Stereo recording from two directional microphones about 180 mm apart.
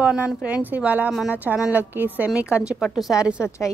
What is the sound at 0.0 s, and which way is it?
Speech, 5° right (ahead or behind).